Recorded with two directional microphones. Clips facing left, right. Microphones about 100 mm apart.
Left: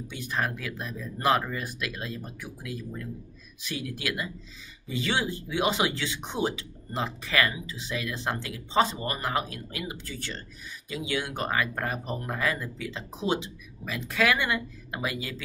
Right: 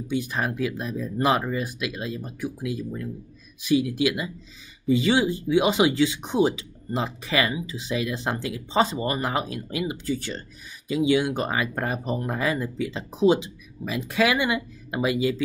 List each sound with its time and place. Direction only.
0.1 s speech: 15° right (ahead or behind)